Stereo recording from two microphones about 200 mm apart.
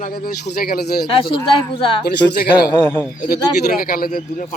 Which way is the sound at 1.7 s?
25° left (ahead or behind).